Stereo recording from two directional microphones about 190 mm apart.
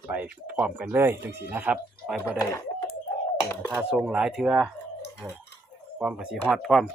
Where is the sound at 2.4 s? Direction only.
15° left (ahead or behind).